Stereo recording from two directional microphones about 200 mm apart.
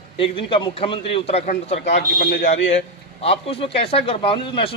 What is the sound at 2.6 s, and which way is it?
Speech, 65° left (ahead or behind).